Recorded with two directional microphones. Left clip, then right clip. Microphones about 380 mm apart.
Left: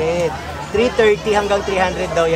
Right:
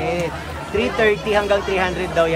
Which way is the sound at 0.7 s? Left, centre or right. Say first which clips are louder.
Left 4 dB; centre.